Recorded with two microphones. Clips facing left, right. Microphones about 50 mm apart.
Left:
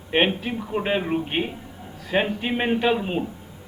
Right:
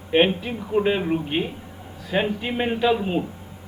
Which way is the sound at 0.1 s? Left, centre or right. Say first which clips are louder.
Right 2 dB; centre.